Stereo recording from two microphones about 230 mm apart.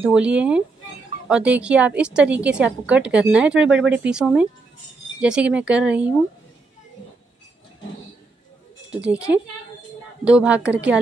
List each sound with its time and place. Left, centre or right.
0.0 s a woman's voice: centre
8.9 s a woman's voice: centre